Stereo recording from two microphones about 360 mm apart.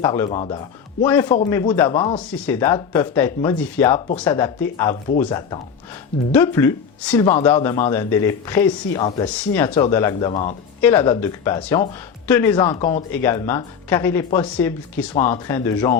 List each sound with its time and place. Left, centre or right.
0.0 s speech: centre